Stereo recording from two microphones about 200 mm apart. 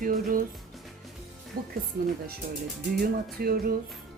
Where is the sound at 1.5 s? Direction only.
45° right (ahead or behind).